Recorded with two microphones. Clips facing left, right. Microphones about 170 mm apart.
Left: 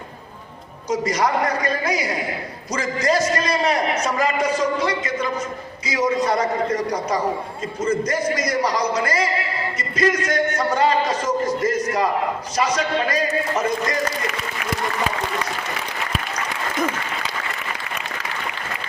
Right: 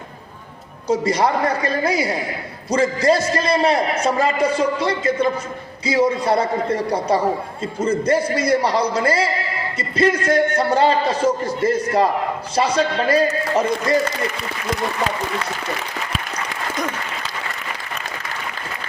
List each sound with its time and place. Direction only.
0.9 s a man's voice: 30° right (ahead or behind)